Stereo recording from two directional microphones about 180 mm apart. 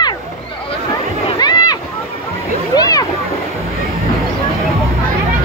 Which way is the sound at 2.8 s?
20° left (ahead or behind).